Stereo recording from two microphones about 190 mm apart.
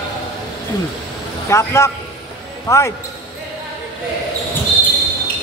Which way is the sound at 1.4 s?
15° left (ahead or behind).